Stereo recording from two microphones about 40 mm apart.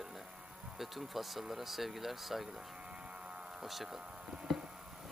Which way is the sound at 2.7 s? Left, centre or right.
Right.